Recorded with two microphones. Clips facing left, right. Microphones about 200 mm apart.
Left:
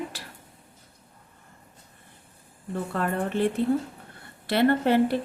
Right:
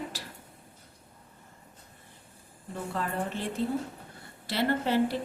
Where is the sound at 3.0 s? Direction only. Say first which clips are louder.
Left 7 dB; 60° left (ahead or behind).